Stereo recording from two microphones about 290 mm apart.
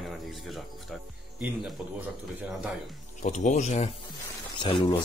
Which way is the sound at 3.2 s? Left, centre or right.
Left.